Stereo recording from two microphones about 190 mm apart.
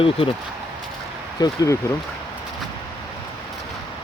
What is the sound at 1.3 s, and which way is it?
Speech, 20° left (ahead or behind).